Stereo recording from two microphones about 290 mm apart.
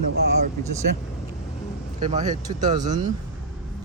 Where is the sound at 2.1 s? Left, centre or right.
Right.